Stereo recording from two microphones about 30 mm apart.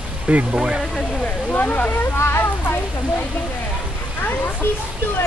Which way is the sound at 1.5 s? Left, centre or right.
Left.